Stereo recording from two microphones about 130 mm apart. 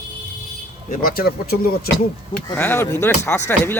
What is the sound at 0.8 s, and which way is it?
Speech, 90° left.